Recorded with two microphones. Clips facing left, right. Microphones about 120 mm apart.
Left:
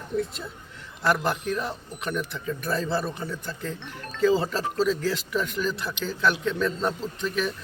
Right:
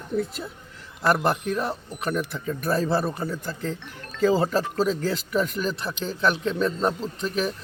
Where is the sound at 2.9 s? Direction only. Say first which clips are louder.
Right 3 dB; 45° right (ahead or behind).